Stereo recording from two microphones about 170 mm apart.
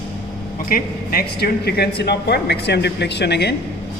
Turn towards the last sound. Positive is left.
turn(degrees=75)  # may be behind; listen again after turning